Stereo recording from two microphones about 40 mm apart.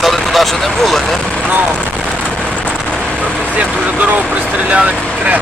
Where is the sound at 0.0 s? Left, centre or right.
Centre.